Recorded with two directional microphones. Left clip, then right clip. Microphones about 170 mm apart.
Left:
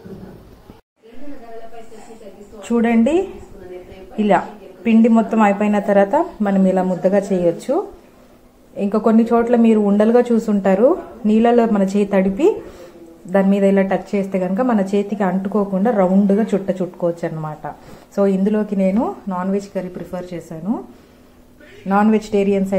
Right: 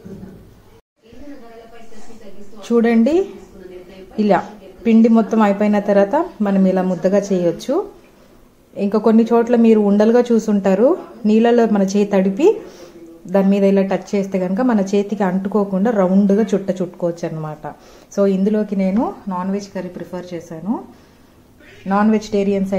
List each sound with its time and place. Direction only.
2.7 s a woman's voice: 20° right (ahead or behind)
4.8 s a woman's voice: 20° right (ahead or behind); by 20.8 s 10° left (ahead or behind)
21.8 s a woman's voice: 5° left (ahead or behind)